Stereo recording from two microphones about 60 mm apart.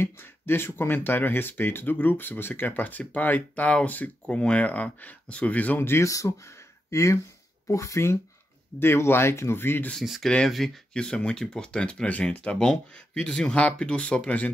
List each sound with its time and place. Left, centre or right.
0.0 s speech: left
6.0 s speech: left
8.7 s speech: left
10.5 s speech: centre
10.9 s speech: centre